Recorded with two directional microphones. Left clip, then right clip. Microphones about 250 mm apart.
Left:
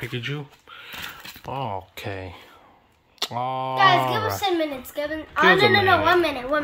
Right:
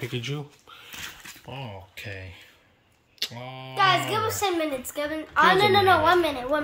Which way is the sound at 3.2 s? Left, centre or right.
Centre.